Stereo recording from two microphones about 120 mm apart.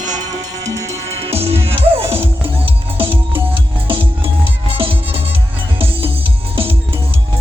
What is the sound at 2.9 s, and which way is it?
Music, 50° right (ahead or behind).